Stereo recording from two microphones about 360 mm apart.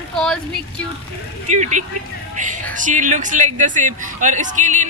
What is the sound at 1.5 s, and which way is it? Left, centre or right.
Speech, centre.